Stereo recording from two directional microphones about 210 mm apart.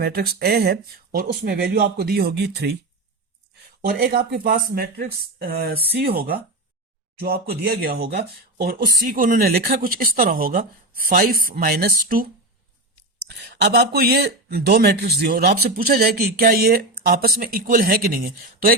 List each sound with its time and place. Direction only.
0.0 s speech: 45° right (ahead or behind)
3.8 s speech: 45° right (ahead or behind)